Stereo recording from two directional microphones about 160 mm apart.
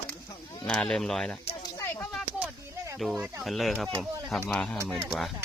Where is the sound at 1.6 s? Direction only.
15° left (ahead or behind).